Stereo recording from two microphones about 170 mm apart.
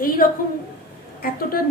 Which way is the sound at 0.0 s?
55° left (ahead or behind).